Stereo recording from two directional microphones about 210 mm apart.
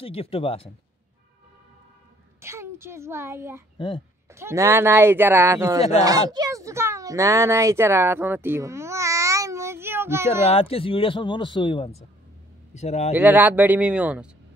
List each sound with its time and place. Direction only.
0.0 s speech: 30° left (ahead or behind)
2.4 s a child's voice: 10° right (ahead or behind)
3.7 s speech: 20° left (ahead or behind)
4.3 s speech: 10° right (ahead or behind)
10.4 s speech: 30° left (ahead or behind)
13.1 s speech: 10° right (ahead or behind)